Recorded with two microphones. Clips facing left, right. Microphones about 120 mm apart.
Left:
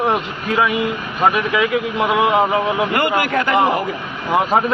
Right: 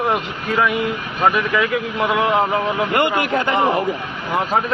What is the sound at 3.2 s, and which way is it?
Speech, 25° right (ahead or behind).